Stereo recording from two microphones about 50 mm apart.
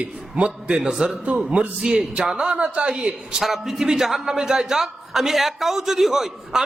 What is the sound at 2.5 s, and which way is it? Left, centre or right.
Speech, right.